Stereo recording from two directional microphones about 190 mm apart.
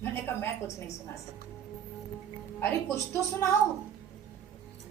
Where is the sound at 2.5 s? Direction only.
15° left (ahead or behind).